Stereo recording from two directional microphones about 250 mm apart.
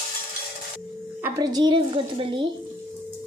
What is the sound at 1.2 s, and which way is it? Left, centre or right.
Speech, centre.